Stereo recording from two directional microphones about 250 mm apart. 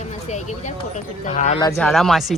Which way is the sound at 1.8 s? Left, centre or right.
Centre.